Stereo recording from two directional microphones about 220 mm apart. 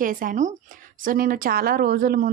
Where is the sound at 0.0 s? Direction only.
40° right (ahead or behind).